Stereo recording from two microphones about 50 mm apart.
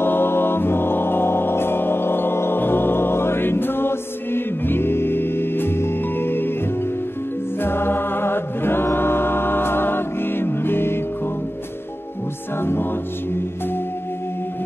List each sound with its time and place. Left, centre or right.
0.0 s music: left
7.6 s music: left
12.5 s music: left